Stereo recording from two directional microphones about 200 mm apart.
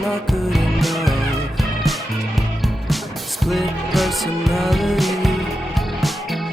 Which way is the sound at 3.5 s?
Centre (ahead or behind).